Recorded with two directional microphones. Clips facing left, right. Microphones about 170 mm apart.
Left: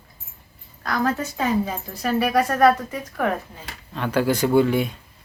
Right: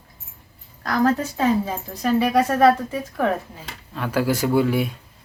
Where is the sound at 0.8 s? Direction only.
35° right (ahead or behind).